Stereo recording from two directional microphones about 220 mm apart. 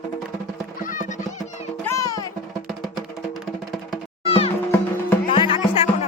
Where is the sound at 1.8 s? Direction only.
15° left (ahead or behind).